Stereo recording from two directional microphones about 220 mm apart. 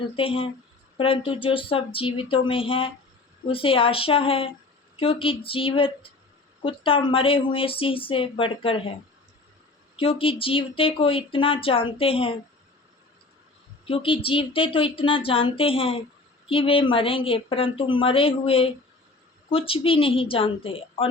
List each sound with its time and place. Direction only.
0.0 s speech: 25° left (ahead or behind)
9.9 s speech: 25° left (ahead or behind)
13.8 s speech: 25° left (ahead or behind)